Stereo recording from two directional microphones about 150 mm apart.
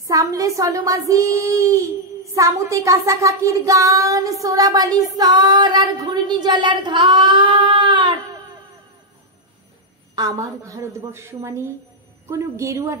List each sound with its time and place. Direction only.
0.0 s child singing: 20° right (ahead or behind)
10.1 s child singing: 25° right (ahead or behind)